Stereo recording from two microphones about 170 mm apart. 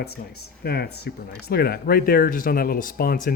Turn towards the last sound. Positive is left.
turn(degrees=55)  # may be behind; listen again after turning